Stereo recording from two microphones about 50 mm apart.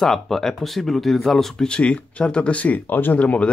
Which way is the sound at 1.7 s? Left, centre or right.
Left.